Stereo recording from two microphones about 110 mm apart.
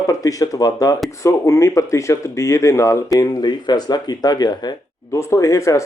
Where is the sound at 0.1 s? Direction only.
30° left (ahead or behind).